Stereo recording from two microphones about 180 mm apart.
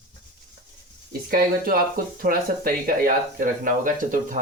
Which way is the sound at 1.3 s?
55° right (ahead or behind).